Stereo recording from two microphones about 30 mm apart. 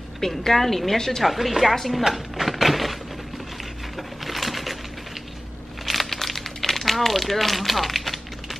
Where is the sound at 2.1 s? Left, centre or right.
Centre.